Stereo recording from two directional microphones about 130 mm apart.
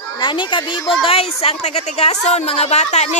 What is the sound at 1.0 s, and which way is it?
A woman's voice, 50° left (ahead or behind).